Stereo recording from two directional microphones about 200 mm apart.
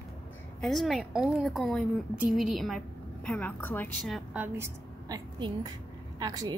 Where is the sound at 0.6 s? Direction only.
Centre (ahead or behind).